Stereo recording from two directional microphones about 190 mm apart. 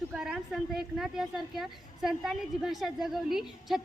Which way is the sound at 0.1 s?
Centre (ahead or behind).